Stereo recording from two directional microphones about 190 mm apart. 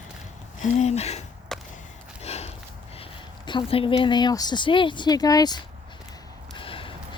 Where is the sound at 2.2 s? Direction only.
35° left (ahead or behind).